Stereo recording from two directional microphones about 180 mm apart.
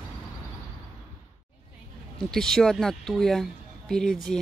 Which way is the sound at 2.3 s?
Centre (ahead or behind).